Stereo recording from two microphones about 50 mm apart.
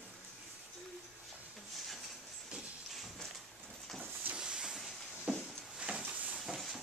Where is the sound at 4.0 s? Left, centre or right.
Right.